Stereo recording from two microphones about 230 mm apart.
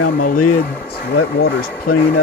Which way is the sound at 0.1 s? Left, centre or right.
Left.